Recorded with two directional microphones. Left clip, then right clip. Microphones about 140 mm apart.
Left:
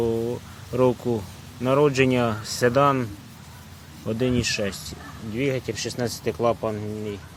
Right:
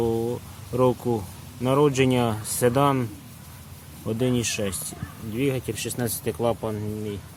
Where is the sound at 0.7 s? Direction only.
10° right (ahead or behind).